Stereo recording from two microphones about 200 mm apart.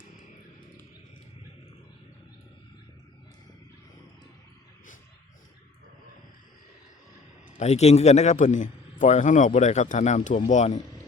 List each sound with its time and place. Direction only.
7.6 s a man's voice: 35° left (ahead or behind)